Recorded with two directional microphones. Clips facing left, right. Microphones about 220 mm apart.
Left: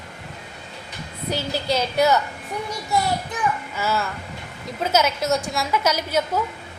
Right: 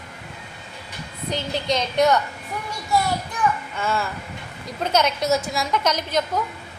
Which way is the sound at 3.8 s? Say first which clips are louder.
Left 1 dB; 5° left (ahead or behind).